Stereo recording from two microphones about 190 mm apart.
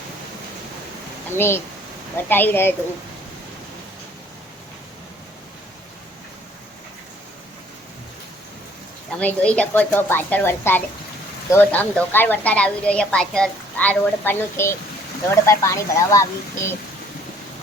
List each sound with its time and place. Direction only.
1.4 s a woman's voice: 10° left (ahead or behind)
9.1 s a woman's voice: 5° left (ahead or behind)